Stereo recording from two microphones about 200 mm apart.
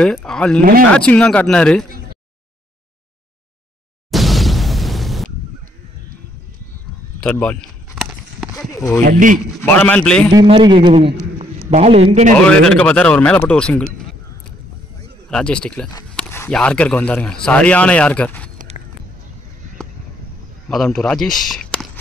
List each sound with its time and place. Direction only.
0.0 s speech: 5° left (ahead or behind)
0.6 s speech: 45° right (ahead or behind)
0.9 s speech: 5° left (ahead or behind)
4.1 s explosion: centre (ahead or behind)
7.2 s a sound: 5° left (ahead or behind)
8.5 s speech: 15° left (ahead or behind)
9.0 s a man's voice: 40° right (ahead or behind)
9.5 s speech: 10° left (ahead or behind)
10.3 s a man's voice: 25° right (ahead or behind)
12.4 s speech: 5° left (ahead or behind)
15.2 s speech: 5° left (ahead or behind)
20.7 s speech: centre (ahead or behind)